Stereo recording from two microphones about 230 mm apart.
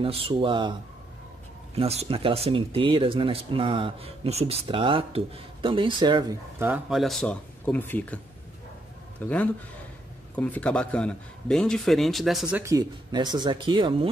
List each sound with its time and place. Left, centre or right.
0.0 s speech: right
1.8 s speech: right; by 8.2 s centre
9.2 s a man's voice: centre; by 14.0 s right